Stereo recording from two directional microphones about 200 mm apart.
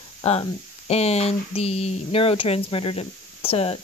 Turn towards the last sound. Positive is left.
turn(degrees=30)  # may be behind; listen again after turning